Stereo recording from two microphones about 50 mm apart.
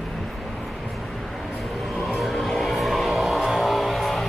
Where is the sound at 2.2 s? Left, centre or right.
Centre.